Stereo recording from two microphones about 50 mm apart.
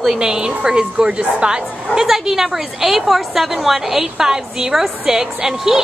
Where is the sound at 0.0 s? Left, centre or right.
Centre.